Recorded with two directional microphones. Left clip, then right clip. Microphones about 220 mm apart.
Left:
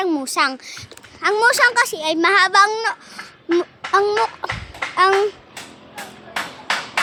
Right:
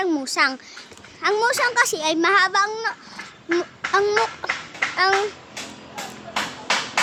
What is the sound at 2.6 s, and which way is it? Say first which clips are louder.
Speech: left 6 dB; 35° left (ahead or behind).